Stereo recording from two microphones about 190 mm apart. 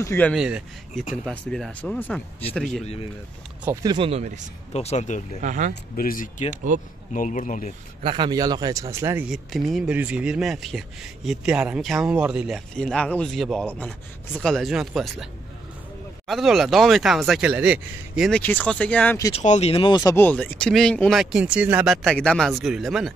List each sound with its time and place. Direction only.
0.0 s speech: 10° left (ahead or behind)
0.3 s speech: 5° right (ahead or behind)
2.8 s speech: 35° left (ahead or behind)
3.8 s speech: 25° right (ahead or behind)
4.7 s speech: 35° left (ahead or behind)
5.4 s speech: 40° right (ahead or behind)
5.9 s speech: 45° left (ahead or behind)
6.5 s speech: 45° right (ahead or behind)
7.2 s speech: 40° left (ahead or behind)
8.0 s speech: 25° right (ahead or behind); by 15.2 s centre (ahead or behind)
16.3 s speech: centre (ahead or behind)
18.4 s speech: 10° left (ahead or behind)
19.3 s speech: 35° left (ahead or behind)
20.0 s speech: 10° left (ahead or behind)